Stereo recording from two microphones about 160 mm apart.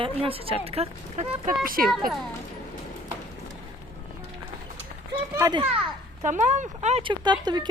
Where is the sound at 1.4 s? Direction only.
60° right (ahead or behind).